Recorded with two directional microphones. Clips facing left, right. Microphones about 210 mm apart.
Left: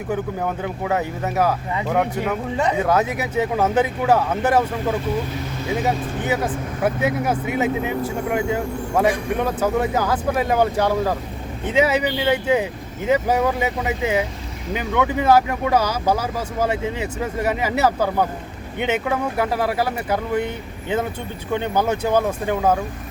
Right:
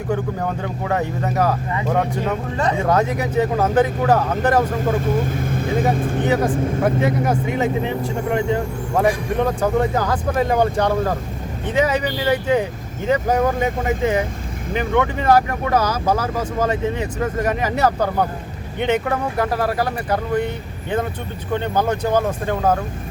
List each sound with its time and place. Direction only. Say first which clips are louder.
0.1 s speech: right 1 dB; 5° left (ahead or behind)
5.5 s speech: right 2 dB; 50° right (ahead or behind)
6.2 s speech: right 4 dB; 5° left (ahead or behind)
21.5 s speech: even; 10° left (ahead or behind)